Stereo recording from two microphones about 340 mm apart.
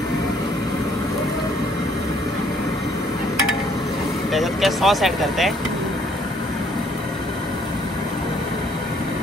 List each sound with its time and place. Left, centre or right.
4.3 s speech: centre